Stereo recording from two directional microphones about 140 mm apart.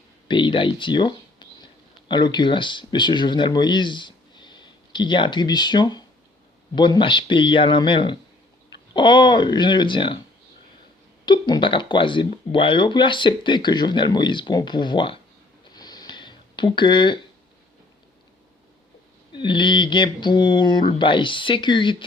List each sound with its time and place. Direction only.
0.3 s speech: 35° left (ahead or behind)
11.3 s speech: 30° left (ahead or behind)
15.7 s a sound: 30° left (ahead or behind)
19.3 s speech: 35° left (ahead or behind)